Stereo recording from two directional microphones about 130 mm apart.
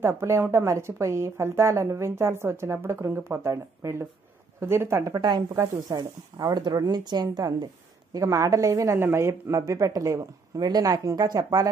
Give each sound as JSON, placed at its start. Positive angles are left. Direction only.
{"t": 0.0, "sound": "a woman's voice", "side_deg": -20}